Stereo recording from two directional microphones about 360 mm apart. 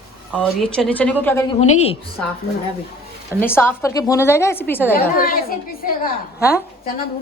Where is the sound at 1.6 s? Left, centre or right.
Centre.